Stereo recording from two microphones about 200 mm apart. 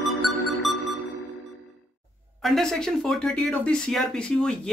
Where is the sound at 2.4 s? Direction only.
Centre (ahead or behind).